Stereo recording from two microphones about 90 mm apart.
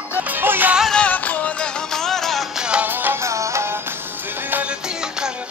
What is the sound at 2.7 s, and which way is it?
Music, 15° right (ahead or behind).